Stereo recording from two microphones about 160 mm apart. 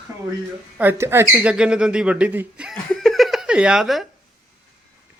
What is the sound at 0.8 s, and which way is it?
Speech, 15° right (ahead or behind).